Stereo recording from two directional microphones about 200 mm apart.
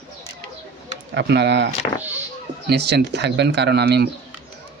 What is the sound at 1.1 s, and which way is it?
A man's voice, 60° right (ahead or behind).